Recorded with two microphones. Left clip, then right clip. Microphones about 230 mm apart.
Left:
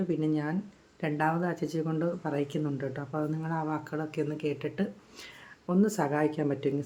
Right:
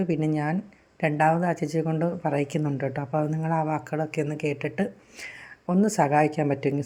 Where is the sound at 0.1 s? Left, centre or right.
Right.